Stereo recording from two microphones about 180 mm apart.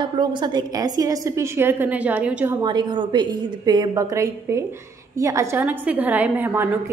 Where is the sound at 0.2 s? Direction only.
25° right (ahead or behind); by 2.5 s 5° right (ahead or behind).